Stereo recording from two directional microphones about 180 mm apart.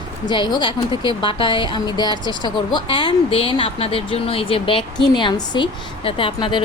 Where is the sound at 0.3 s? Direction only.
25° left (ahead or behind).